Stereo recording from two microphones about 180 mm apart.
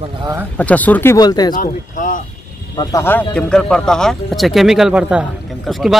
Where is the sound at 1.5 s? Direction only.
45° left (ahead or behind).